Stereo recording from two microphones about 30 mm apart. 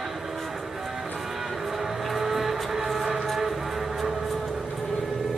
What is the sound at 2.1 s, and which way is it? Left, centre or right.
Vehicle, centre.